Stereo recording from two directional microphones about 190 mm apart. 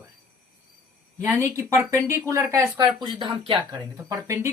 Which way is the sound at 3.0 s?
25° right (ahead or behind).